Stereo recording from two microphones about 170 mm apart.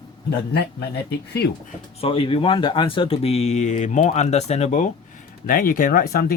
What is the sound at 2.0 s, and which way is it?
Speech, 35° left (ahead or behind).